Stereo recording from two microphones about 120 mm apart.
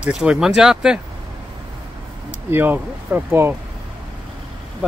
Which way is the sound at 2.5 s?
15° right (ahead or behind).